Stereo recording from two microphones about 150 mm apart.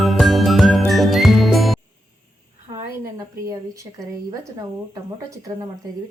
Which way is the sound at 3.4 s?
20° right (ahead or behind).